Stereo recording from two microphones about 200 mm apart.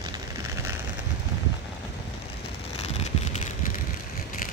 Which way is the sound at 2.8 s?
35° left (ahead or behind).